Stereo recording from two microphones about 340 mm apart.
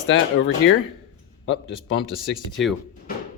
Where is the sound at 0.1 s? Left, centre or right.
Left.